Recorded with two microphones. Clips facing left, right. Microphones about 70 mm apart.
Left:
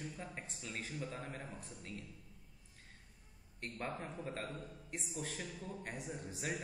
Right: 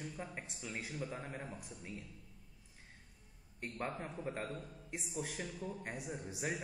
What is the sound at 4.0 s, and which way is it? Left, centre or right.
A man's voice, centre.